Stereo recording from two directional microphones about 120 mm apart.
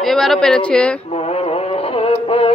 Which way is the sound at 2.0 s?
55° left (ahead or behind).